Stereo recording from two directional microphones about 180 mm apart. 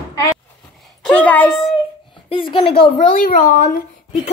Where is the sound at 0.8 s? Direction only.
5° left (ahead or behind).